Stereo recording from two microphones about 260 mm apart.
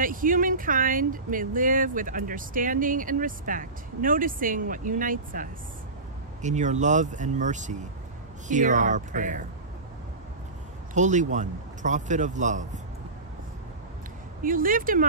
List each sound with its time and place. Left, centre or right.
0.0 s a man's voice: right
11.0 s a man's voice: right
14.4 s speech: right